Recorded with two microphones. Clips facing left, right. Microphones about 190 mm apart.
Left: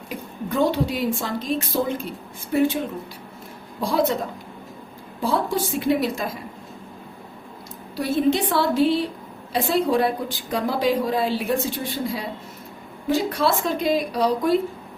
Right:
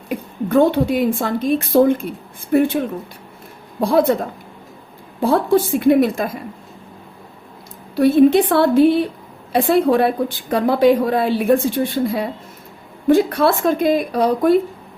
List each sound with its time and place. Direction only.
0.1 s a woman's voice: 55° right (ahead or behind)
3.8 s a woman's voice: 55° right (ahead or behind)
5.2 s a woman's voice: 55° right (ahead or behind)
7.9 s a woman's voice: 60° right (ahead or behind)